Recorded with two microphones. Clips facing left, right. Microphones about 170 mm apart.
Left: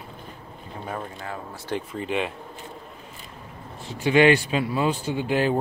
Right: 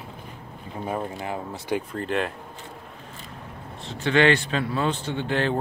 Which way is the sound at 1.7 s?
Centre (ahead or behind).